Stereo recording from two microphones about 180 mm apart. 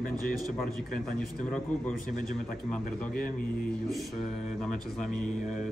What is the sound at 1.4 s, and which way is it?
Speech, 5° left (ahead or behind).